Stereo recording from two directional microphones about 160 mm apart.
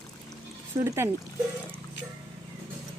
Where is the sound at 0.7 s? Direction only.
20° right (ahead or behind).